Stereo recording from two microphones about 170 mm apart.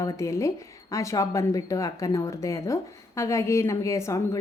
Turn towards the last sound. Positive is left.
turn(degrees=15)  # may be behind; listen again after turning